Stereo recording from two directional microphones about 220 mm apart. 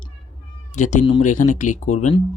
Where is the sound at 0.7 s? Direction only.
30° left (ahead or behind).